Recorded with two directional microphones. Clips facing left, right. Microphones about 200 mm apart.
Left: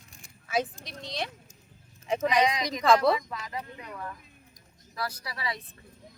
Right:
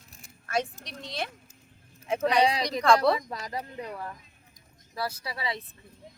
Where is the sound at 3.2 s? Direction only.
40° right (ahead or behind).